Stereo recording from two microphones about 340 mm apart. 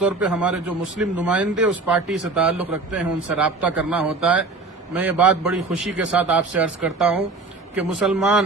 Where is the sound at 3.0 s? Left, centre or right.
Right.